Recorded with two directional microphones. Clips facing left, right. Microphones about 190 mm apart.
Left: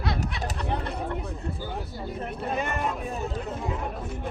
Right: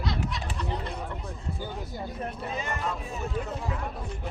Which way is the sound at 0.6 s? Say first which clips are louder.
Left 3 dB; 60° left (ahead or behind).